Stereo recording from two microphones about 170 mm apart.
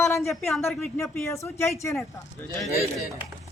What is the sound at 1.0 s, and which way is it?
Speech, 15° left (ahead or behind).